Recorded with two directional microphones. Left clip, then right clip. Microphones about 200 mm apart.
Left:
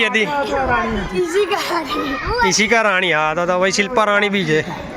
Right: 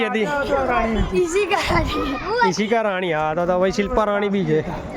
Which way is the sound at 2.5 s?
10° right (ahead or behind).